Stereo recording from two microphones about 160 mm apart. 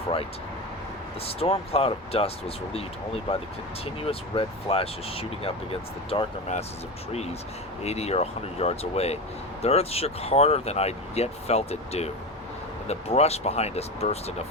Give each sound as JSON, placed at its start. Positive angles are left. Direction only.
{"t": 1.2, "sound": "speech", "side_deg": 40}
{"t": 4.0, "sound": "speech", "side_deg": 35}
{"t": 6.5, "sound": "speech", "side_deg": 50}
{"t": 7.8, "sound": "speech", "side_deg": 40}